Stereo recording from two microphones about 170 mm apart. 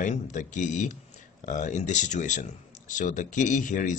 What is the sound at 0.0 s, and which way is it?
Speech, 45° left (ahead or behind).